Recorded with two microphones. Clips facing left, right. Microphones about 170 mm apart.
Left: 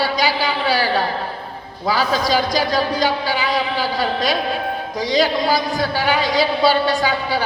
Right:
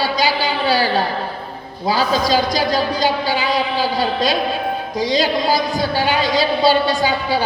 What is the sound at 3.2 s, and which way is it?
A man's voice, 30° right (ahead or behind).